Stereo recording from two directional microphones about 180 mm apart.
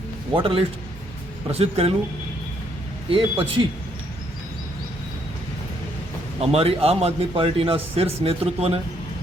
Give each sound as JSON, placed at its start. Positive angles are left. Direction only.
{"t": 0.3, "sound": "speech", "side_deg": -30}
{"t": 3.1, "sound": "speech", "side_deg": -30}
{"t": 6.4, "sound": "speech", "side_deg": -35}